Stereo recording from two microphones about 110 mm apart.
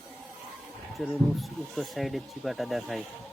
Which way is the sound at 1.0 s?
Centre (ahead or behind).